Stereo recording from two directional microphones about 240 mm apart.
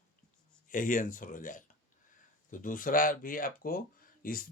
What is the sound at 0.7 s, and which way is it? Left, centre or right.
Speech, left.